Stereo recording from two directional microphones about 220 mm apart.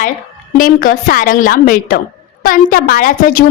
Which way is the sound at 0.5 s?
40° left (ahead or behind).